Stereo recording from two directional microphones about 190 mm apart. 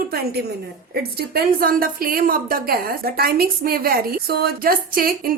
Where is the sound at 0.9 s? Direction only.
55° right (ahead or behind).